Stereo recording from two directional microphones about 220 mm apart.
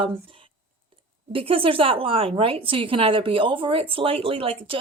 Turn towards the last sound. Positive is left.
turn(degrees=-25)  # may be behind; listen again after turning